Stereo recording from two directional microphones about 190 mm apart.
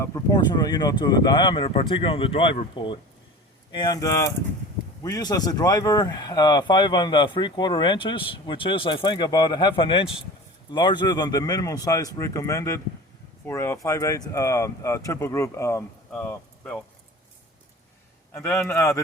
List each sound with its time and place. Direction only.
0.0 s speech: 20° left (ahead or behind)
18.3 s speech: 15° left (ahead or behind)